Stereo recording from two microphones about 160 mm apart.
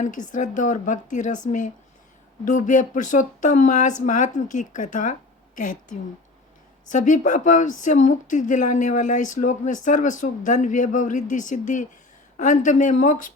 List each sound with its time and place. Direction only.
0.0 s speech: 50° left (ahead or behind)
6.8 s speech: 50° left (ahead or behind)